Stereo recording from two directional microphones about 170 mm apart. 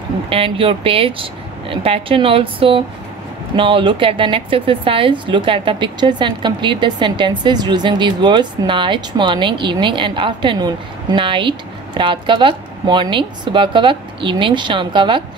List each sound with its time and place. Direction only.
0.3 s a woman's voice: 35° right (ahead or behind)